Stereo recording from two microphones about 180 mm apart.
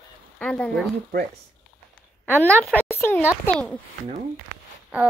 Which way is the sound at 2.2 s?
10° left (ahead or behind).